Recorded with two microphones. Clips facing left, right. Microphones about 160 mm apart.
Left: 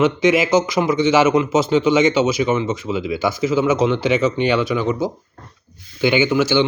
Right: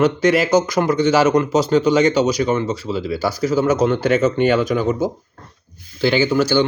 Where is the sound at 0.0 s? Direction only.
40° right (ahead or behind).